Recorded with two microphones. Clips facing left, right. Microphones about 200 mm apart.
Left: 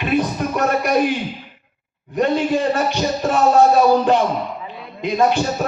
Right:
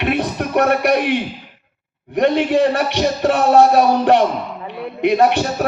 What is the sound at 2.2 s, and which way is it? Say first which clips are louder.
A man's voice: right 3 dB; 65° right (ahead or behind).